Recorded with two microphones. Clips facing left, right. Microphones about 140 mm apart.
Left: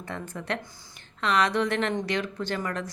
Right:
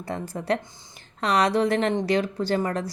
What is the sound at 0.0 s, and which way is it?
Speech, 35° right (ahead or behind).